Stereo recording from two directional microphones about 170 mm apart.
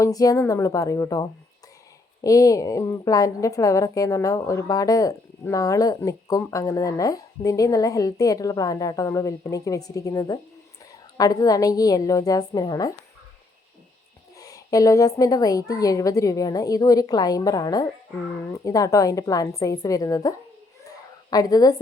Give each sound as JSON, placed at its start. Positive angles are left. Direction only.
{"t": 0.0, "sound": "a woman's voice", "side_deg": 20}
{"t": 14.3, "sound": "a woman's voice", "side_deg": 20}